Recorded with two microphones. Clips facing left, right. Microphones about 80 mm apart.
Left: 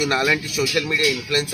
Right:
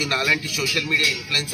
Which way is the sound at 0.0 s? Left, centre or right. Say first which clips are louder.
Left 3 dB; left.